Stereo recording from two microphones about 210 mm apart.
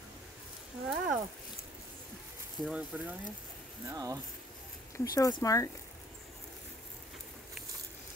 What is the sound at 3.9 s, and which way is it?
Speech, 15° right (ahead or behind).